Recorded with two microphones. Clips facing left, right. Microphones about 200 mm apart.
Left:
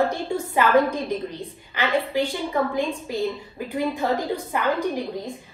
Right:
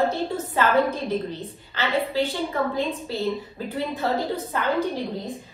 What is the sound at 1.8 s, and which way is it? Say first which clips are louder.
A woman's voice: left 1 dB; 15° left (ahead or behind).